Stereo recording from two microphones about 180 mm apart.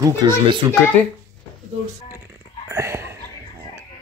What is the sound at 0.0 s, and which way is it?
Speech, 25° right (ahead or behind).